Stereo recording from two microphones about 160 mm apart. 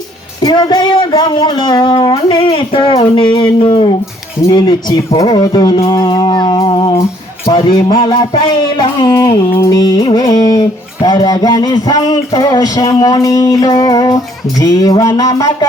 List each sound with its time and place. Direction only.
0.4 s music: 25° left (ahead or behind)